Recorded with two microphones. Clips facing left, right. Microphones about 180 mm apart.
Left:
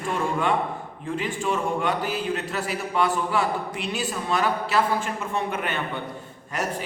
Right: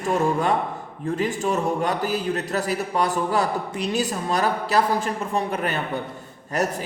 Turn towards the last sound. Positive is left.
turn(degrees=-40)  # may be behind; listen again after turning